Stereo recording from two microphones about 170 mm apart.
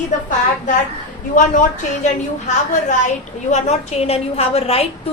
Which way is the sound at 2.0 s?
45° left (ahead or behind).